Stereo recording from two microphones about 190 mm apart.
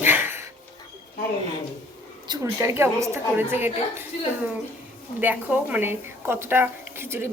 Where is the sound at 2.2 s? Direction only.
20° right (ahead or behind).